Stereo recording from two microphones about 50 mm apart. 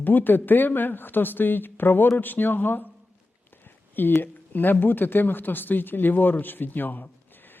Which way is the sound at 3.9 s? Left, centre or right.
Left.